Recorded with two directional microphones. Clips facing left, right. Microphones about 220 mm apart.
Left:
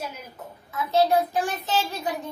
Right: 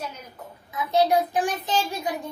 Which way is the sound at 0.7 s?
15° right (ahead or behind).